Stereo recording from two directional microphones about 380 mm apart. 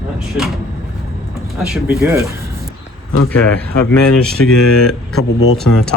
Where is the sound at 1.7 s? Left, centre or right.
Centre.